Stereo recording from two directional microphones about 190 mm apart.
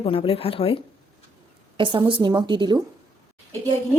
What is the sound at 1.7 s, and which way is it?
A woman's voice, 25° right (ahead or behind).